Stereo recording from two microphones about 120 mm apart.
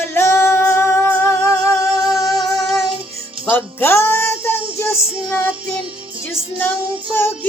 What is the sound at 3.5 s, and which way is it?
Music, 20° left (ahead or behind).